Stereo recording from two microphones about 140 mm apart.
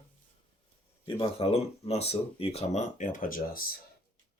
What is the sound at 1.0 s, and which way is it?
Speech, 40° left (ahead or behind).